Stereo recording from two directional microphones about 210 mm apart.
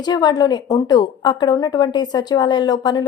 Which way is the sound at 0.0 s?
20° left (ahead or behind).